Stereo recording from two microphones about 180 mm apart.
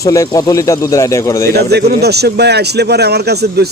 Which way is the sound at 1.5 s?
65° right (ahead or behind).